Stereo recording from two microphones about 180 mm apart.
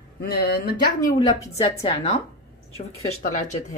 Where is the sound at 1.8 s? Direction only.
35° left (ahead or behind).